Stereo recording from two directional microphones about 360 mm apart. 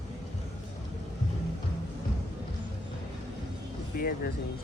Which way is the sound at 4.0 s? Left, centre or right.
Left.